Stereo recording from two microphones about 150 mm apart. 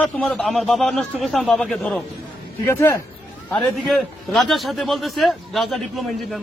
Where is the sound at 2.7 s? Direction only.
15° left (ahead or behind).